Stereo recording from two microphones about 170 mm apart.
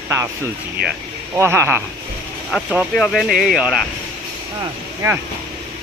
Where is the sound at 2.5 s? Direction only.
5° right (ahead or behind).